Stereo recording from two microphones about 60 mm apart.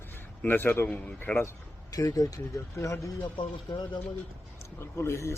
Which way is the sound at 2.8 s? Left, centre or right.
Left.